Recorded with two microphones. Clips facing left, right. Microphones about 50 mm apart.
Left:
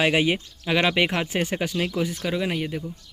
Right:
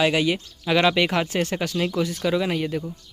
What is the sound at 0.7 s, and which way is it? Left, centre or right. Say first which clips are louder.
Speech: right 2 dB; centre.